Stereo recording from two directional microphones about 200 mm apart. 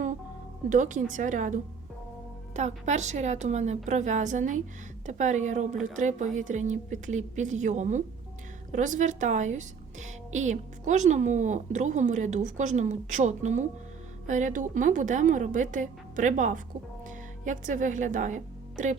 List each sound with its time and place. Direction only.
0.7 s a woman's voice: 40° right (ahead or behind)